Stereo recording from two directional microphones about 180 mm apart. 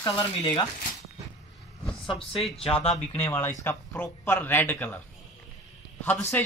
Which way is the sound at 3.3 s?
10° left (ahead or behind).